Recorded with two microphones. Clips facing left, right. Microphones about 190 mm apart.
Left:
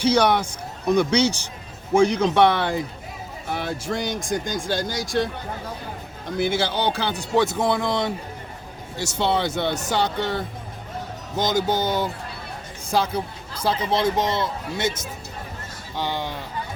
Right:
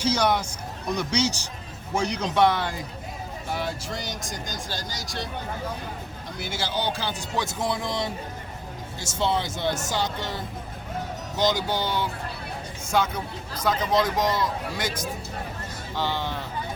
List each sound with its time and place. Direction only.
0.0 s speech: 60° left (ahead or behind)
6.3 s speech: 55° left (ahead or behind)
11.3 s speech: 45° left (ahead or behind)
12.9 s speech: 30° left (ahead or behind); by 16.4 s 15° left (ahead or behind)